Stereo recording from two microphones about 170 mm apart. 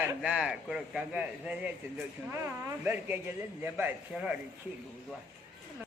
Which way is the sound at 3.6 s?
10° right (ahead or behind).